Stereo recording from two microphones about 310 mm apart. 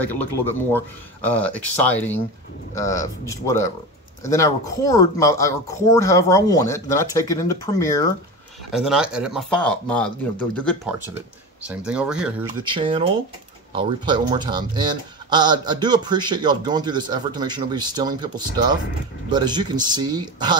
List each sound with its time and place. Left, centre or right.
0.0 s speech: centre
8.7 s speech: centre
12.6 s speech: centre